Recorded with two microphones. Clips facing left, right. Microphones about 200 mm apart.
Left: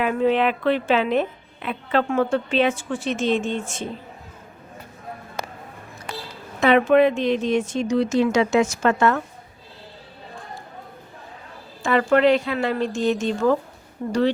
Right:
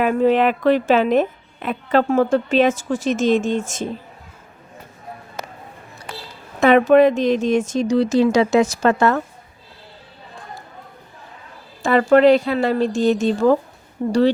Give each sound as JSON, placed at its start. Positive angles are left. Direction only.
{"t": 0.0, "sound": "a woman's voice", "side_deg": -45}
{"t": 6.6, "sound": "speech", "side_deg": -45}
{"t": 11.8, "sound": "speech", "side_deg": -35}